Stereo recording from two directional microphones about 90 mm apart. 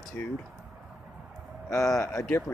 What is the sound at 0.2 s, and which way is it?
Speech, 20° left (ahead or behind).